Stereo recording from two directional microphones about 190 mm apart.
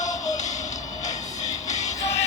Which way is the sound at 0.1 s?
15° left (ahead or behind).